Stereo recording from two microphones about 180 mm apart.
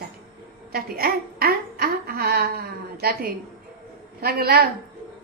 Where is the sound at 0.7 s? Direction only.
55° right (ahead or behind).